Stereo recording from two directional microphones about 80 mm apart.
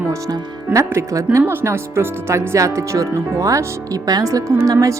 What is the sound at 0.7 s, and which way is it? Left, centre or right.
Speech, right.